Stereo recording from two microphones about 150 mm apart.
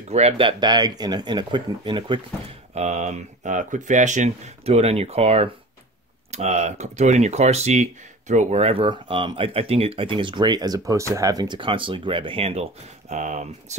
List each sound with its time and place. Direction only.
0.1 s speech: 40° right (ahead or behind)
2.7 s speech: 45° right (ahead or behind)
13.1 s speech: 55° right (ahead or behind)